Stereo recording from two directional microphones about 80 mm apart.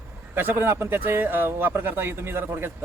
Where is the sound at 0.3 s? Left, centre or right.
Right.